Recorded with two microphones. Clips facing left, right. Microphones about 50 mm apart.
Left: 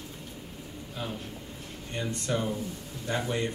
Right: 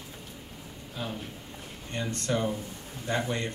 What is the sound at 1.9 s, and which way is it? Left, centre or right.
A man's voice, centre.